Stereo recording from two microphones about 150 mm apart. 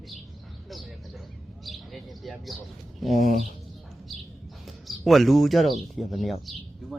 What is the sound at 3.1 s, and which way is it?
Speech, 50° right (ahead or behind).